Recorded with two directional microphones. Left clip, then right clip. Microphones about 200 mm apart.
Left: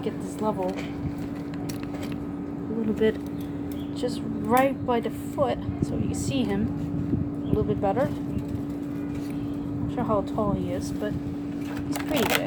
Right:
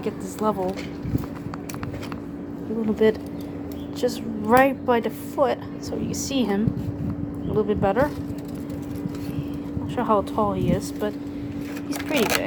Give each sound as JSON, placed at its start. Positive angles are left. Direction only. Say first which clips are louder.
{"t": 3.0, "sound": "a woman's voice", "louder": "right 5 dB", "side_deg": -20}
{"t": 7.7, "sound": "a woman's voice", "louder": "right 4 dB", "side_deg": -25}
{"t": 10.0, "sound": "speech", "louder": "right 5 dB", "side_deg": -30}
{"t": 12.1, "sound": "speech", "louder": "right 2 dB", "side_deg": -5}